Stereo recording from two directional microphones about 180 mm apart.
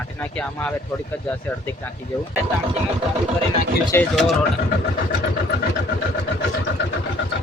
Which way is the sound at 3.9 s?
15° left (ahead or behind).